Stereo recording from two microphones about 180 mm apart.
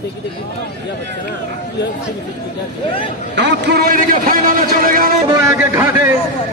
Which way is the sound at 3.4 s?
70° right (ahead or behind).